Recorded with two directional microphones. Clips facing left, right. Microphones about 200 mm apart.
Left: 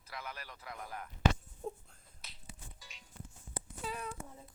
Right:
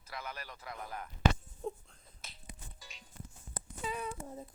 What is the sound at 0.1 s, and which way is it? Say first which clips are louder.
Speech: right 2 dB; 40° right (ahead or behind).